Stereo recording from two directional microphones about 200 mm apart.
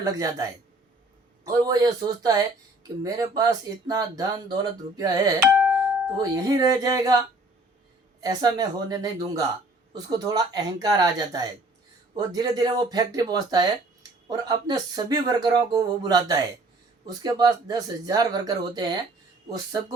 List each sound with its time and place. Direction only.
0.0 s speech: 15° right (ahead or behind)
1.5 s speech: 20° right (ahead or behind)
5.5 s music: 5° right (ahead or behind)
6.1 s speech: 15° right (ahead or behind)